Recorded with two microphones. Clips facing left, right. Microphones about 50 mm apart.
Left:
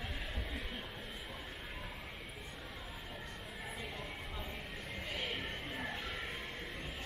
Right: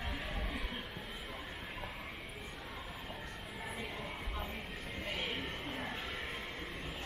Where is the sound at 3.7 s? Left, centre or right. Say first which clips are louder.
Right 2 dB; centre.